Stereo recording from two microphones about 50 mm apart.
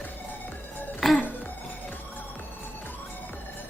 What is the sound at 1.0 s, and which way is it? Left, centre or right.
Music, centre.